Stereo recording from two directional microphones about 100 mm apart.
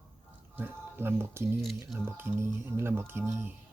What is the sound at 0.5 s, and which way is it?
Speech, 20° right (ahead or behind).